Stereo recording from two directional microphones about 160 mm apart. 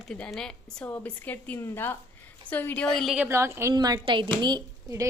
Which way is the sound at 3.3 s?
15° right (ahead or behind).